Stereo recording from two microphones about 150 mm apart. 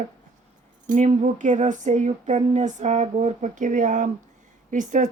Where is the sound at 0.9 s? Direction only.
55° right (ahead or behind).